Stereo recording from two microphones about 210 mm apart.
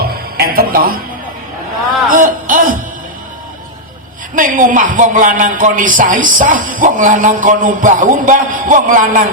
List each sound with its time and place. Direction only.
0.0 s music: 45° right (ahead or behind)
2.0 s a sound: 40° right (ahead or behind)
4.4 s speech: 40° right (ahead or behind)